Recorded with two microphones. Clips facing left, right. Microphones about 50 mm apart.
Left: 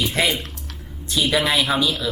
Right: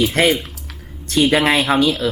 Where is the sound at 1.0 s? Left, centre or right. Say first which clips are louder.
Right 5 dB; right.